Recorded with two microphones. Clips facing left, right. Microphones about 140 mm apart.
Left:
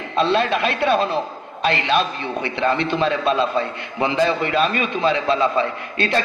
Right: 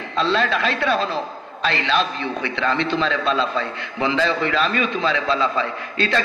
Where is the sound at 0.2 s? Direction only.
20° left (ahead or behind).